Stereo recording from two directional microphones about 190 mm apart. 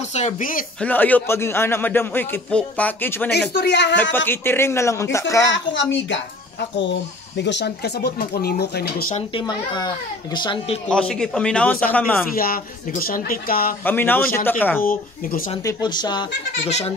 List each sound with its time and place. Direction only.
0.1 s speech: 40° left (ahead or behind)
0.7 s a man's voice: 10° left (ahead or behind)
3.3 s speech: 60° left (ahead or behind)
4.3 s a man's voice: 10° left (ahead or behind)
5.5 s speech: 75° left (ahead or behind); by 9.1 s 55° left (ahead or behind)
9.1 s a child's voice: 25° left (ahead or behind)
10.9 s a man's voice: 5° left (ahead or behind)
12.4 s speech: 50° left (ahead or behind)
13.8 s a man's voice: 10° left (ahead or behind)
14.9 s speech: 50° left (ahead or behind)
15.6 s a child's voice: 20° left (ahead or behind)
16.6 s speech: 35° left (ahead or behind)